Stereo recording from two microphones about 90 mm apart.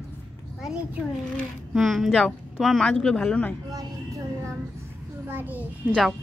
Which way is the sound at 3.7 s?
35° right (ahead or behind).